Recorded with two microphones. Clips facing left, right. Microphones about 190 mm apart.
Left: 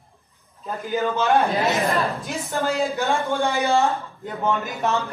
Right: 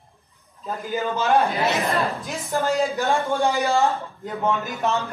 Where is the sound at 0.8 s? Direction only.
Centre (ahead or behind).